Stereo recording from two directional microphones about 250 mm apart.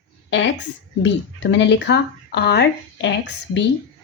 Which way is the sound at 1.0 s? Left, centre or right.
Left.